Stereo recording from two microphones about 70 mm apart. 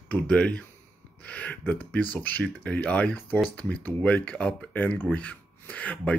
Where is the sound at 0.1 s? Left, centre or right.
Centre.